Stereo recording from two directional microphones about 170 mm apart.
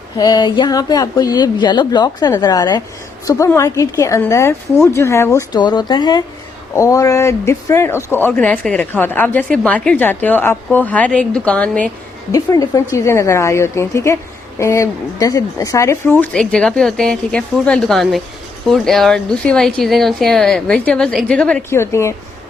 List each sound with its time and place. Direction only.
0.2 s speech: 25° left (ahead or behind); by 11.9 s 5° left (ahead or behind)
12.3 s speech: 20° left (ahead or behind)